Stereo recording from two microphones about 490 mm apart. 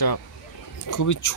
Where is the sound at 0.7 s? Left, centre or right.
Left.